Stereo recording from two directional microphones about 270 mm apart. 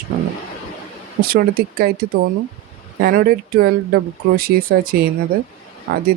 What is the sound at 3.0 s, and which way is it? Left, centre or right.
Speech, right.